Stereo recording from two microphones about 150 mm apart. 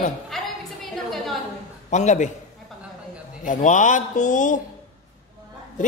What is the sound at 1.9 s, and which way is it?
Speech, 50° left (ahead or behind).